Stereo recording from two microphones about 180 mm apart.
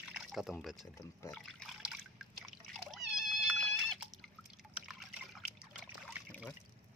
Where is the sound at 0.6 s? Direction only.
Centre (ahead or behind).